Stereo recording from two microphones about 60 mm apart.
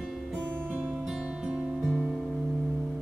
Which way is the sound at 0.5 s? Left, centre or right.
Right.